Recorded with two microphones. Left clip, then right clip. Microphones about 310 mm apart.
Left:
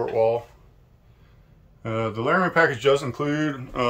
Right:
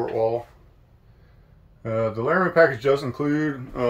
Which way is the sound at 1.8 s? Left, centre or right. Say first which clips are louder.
Right 2 dB; centre.